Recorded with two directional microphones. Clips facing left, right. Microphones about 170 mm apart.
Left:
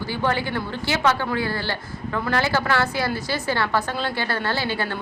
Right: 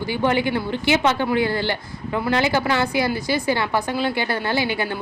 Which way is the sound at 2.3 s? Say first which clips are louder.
Right 2 dB; 15° right (ahead or behind).